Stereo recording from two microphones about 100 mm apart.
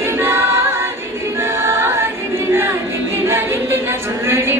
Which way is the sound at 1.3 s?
25° right (ahead or behind).